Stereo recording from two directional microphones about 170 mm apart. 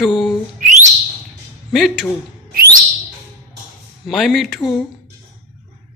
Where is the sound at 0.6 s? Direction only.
45° right (ahead or behind).